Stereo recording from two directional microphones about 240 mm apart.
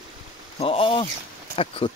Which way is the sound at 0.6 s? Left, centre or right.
Left.